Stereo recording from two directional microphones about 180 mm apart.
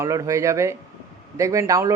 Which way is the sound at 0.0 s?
20° right (ahead or behind).